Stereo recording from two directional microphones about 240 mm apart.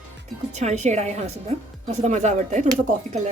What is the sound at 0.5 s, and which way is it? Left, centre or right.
Speech, right.